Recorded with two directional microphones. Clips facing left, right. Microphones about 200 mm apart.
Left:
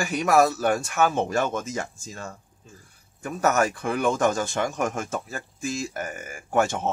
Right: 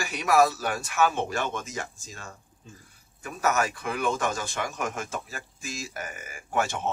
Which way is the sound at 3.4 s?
45° left (ahead or behind).